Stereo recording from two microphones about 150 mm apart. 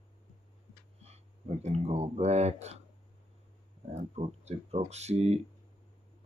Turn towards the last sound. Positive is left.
turn(degrees=-45)  # may be behind; listen again after turning